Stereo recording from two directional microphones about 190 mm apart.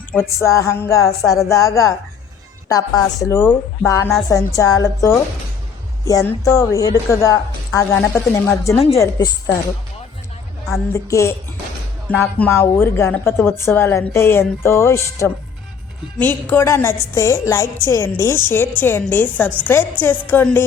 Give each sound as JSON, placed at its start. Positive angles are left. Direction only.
{"t": 0.3, "sound": "a woman's voice", "side_deg": 15}
{"t": 10.9, "sound": "a woman's voice", "side_deg": 15}